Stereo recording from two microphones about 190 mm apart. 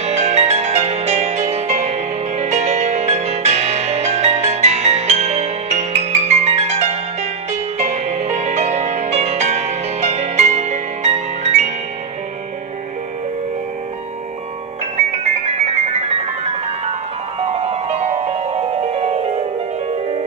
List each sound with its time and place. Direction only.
0.0 s music: 35° right (ahead or behind)
15.0 s music: 35° right (ahead or behind)